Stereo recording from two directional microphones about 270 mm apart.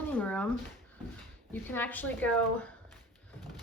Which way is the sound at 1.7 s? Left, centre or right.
Centre.